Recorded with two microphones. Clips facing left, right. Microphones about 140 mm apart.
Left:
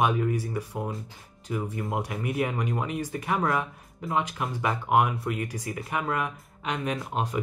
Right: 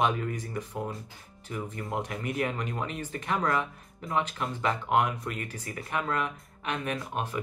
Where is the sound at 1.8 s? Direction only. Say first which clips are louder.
Left 3 dB; 5° left (ahead or behind).